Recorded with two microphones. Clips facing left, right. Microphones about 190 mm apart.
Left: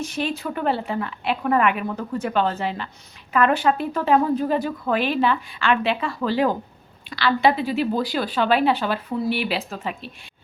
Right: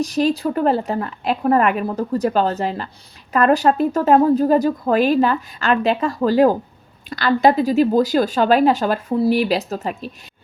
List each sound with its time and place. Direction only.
0.0 s a woman's voice: 40° right (ahead or behind)